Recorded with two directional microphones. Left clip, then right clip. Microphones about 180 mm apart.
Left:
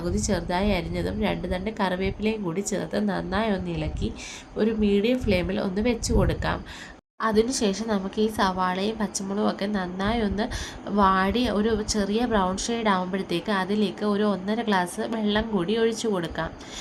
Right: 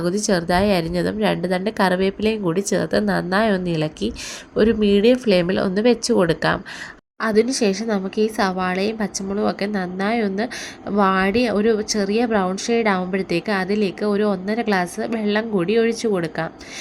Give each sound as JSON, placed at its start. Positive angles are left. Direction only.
{"t": 0.0, "sound": "a woman's voice", "side_deg": -30}